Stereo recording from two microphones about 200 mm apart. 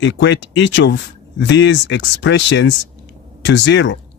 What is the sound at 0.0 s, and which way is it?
Speech, 65° left (ahead or behind).